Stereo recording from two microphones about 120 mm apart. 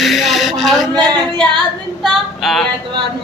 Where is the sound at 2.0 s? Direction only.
Centre (ahead or behind).